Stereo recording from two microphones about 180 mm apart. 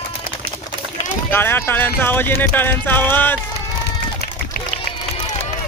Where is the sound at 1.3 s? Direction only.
10° left (ahead or behind).